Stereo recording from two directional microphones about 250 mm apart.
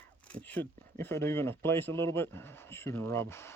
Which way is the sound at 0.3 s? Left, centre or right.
Centre.